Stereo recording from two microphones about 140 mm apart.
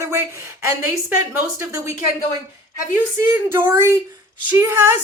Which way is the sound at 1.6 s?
20° right (ahead or behind).